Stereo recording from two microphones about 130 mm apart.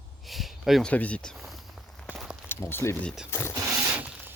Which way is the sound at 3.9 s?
10° right (ahead or behind).